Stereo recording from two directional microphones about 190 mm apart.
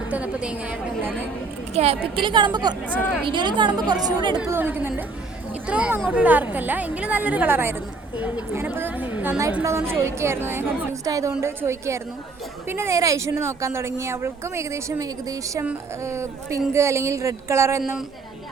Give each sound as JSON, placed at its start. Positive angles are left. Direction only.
{"t": 0.1, "sound": "a woman's voice", "side_deg": -5}
{"t": 1.7, "sound": "a woman's voice", "side_deg": -30}
{"t": 4.4, "sound": "a woman's voice", "side_deg": -10}